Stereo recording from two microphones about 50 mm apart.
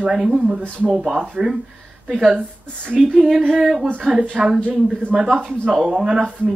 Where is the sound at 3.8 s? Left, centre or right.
Right.